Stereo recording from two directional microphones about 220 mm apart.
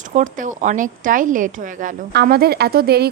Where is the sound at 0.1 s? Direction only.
35° right (ahead or behind).